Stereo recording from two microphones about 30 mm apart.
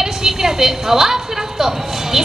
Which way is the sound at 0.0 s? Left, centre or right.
Right.